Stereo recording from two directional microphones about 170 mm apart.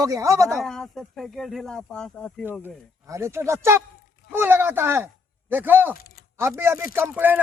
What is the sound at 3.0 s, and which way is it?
Speech, 15° right (ahead or behind).